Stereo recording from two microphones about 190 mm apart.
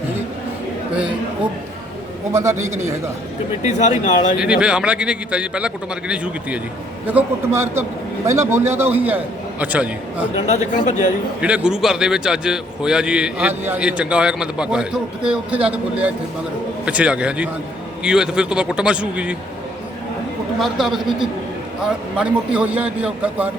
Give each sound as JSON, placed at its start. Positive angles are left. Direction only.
{"t": 2.3, "sound": "a man's voice", "side_deg": -15}
{"t": 3.6, "sound": "speech", "side_deg": 40}
{"t": 4.4, "sound": "a man's voice", "side_deg": -5}
{"t": 10.3, "sound": "speech", "side_deg": 35}
{"t": 11.3, "sound": "a man's voice", "side_deg": -5}
{"t": 20.6, "sound": "a man's voice", "side_deg": 0}